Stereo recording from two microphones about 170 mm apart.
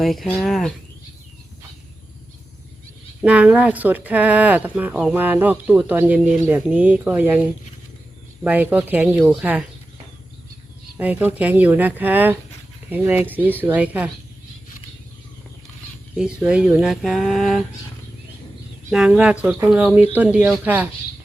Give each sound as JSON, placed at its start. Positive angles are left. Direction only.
{"t": 0.0, "sound": "speech", "side_deg": 0}
{"t": 3.2, "sound": "speech", "side_deg": -10}
{"t": 8.4, "sound": "speech", "side_deg": -10}
{"t": 10.9, "sound": "speech", "side_deg": -10}
{"t": 16.1, "sound": "speech", "side_deg": -5}
{"t": 18.9, "sound": "speech", "side_deg": -5}